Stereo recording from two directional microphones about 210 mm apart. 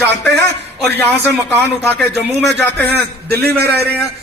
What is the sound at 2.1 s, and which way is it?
Speech, 10° left (ahead or behind).